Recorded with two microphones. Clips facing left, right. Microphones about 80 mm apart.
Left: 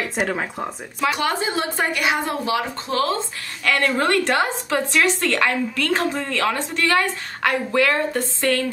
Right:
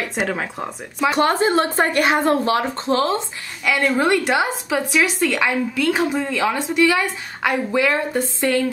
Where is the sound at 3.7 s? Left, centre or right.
Centre.